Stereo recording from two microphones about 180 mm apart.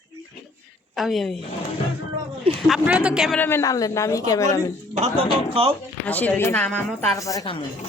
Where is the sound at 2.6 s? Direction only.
5° right (ahead or behind).